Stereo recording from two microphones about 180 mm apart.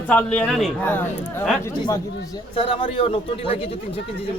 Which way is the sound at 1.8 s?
25° left (ahead or behind).